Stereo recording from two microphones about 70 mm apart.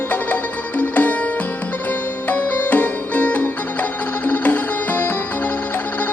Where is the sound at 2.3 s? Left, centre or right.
Left.